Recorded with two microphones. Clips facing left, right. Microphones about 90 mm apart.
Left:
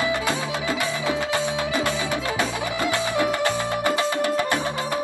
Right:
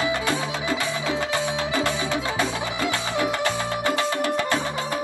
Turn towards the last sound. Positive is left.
turn(degrees=20)  # may be behind; listen again after turning